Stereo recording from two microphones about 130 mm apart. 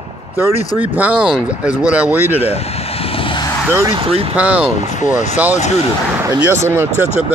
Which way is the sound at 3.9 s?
45° right (ahead or behind).